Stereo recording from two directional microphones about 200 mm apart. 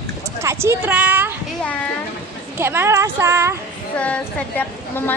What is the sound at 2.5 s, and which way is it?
A woman's voice, 10° right (ahead or behind).